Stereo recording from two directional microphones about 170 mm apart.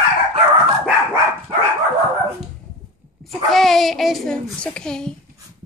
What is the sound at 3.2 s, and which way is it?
A child's voice, centre (ahead or behind).